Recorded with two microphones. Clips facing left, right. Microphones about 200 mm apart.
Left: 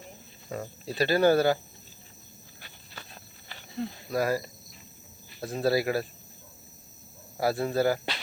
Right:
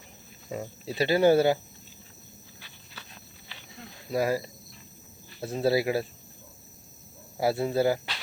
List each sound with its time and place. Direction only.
0.5 s speech: 20° right (ahead or behind)
2.6 s a sound: 50° left (ahead or behind)
3.8 s speech: 35° left (ahead or behind)
4.1 s speech: 20° right (ahead or behind)
7.3 s speech: 20° right (ahead or behind)